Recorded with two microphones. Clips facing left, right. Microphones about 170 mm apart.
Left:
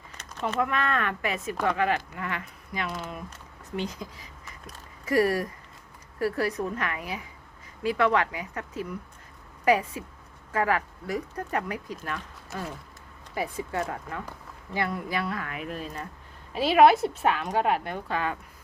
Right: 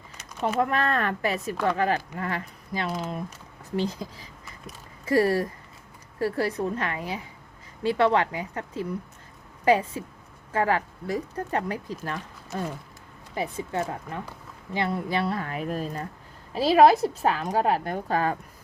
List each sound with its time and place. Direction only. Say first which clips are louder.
0.6 s a woman's voice: right 2 dB; 35° right (ahead or behind)
13.3 s a woman's voice: right 1 dB; 25° right (ahead or behind); by 18.3 s 40° right (ahead or behind)